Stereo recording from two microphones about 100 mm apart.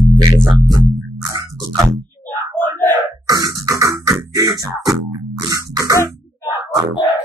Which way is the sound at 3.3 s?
35° right (ahead or behind).